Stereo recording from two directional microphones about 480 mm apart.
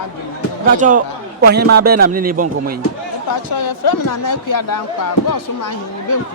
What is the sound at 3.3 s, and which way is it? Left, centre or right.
Speech, left.